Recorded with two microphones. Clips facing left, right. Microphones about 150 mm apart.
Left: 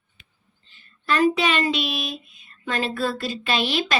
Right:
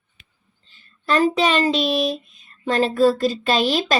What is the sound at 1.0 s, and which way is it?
Speech, 40° right (ahead or behind).